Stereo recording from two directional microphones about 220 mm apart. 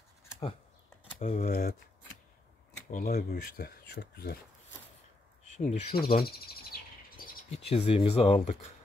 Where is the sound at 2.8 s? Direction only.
40° left (ahead or behind).